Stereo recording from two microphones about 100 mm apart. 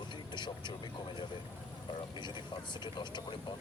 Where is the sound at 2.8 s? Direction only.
50° left (ahead or behind).